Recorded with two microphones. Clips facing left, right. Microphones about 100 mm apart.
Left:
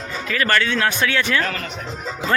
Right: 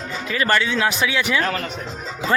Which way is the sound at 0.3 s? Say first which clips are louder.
Even; 15° right (ahead or behind).